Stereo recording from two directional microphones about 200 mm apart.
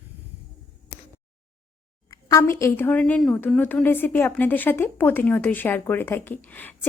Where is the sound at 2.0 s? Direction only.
15° left (ahead or behind).